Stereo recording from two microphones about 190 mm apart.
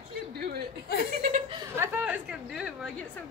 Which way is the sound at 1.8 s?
10° right (ahead or behind).